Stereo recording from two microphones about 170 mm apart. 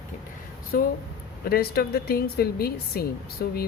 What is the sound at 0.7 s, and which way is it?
A woman's voice, 60° left (ahead or behind).